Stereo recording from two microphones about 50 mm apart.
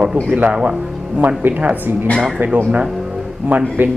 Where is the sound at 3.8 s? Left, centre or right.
Right.